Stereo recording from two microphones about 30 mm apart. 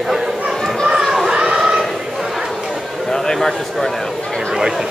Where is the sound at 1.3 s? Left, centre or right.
Right.